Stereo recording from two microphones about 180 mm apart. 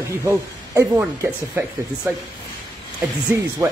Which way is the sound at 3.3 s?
15° right (ahead or behind).